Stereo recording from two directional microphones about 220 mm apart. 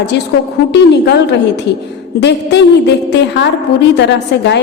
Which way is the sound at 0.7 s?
50° left (ahead or behind).